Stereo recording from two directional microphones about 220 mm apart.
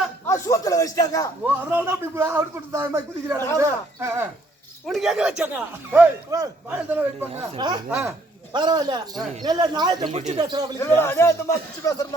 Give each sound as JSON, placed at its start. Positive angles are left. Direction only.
{"t": 0.3, "sound": "a man's voice", "side_deg": 15}
{"t": 1.5, "sound": "speech", "side_deg": -10}
{"t": 4.9, "sound": "speech", "side_deg": 0}
{"t": 7.9, "sound": "speech", "side_deg": -5}
{"t": 8.5, "sound": "speech", "side_deg": -20}
{"t": 10.1, "sound": "speech", "side_deg": -30}
{"t": 10.8, "sound": "a man's voice", "side_deg": 10}